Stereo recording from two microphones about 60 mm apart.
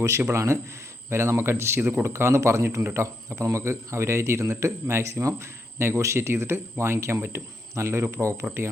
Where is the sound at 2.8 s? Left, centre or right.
Right.